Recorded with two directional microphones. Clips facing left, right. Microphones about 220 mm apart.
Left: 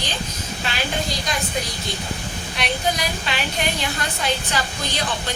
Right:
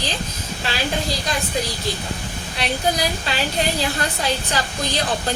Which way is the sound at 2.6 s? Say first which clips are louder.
Right 2 dB; 35° right (ahead or behind).